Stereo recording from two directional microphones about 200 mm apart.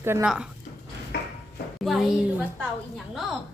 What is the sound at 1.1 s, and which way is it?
Dishes, 55° left (ahead or behind).